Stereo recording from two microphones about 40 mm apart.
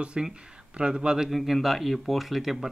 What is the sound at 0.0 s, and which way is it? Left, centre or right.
Speech, right.